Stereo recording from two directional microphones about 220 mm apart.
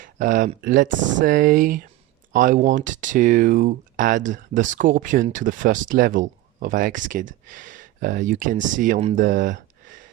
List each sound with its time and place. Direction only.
0.0 s speech: 35° right (ahead or behind)